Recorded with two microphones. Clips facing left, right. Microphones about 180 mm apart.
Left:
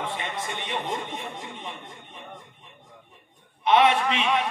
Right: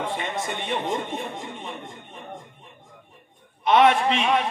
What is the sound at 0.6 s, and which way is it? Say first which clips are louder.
Speech: right 4 dB; 50° right (ahead or behind).